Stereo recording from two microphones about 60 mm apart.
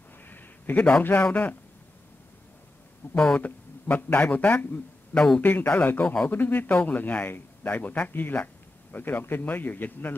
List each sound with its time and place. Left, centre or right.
0.3 s a sound: left
1.0 s speech: left
3.0 s speech: left
3.3 s speech: left
5.1 s a man's voice: centre
5.4 s speech: left